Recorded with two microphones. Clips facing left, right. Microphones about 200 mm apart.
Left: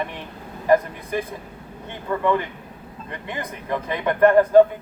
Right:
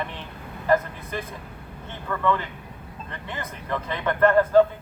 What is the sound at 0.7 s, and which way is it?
A man's voice, 15° left (ahead or behind).